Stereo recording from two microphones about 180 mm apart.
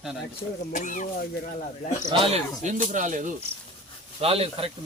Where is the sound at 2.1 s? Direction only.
30° right (ahead or behind).